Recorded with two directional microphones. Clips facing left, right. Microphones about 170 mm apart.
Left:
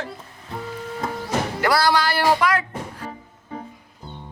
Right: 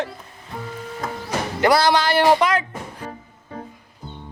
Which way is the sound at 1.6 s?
20° right (ahead or behind).